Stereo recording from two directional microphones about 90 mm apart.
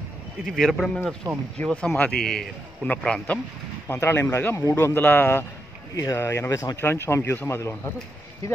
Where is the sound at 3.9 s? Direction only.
25° left (ahead or behind).